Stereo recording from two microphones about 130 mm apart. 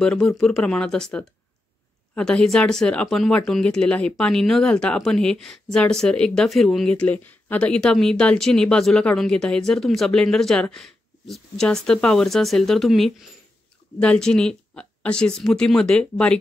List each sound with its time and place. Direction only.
0.0 s speech: 5° left (ahead or behind)